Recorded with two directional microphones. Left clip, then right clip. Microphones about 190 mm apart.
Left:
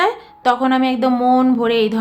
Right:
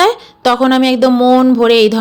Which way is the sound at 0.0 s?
30° right (ahead or behind).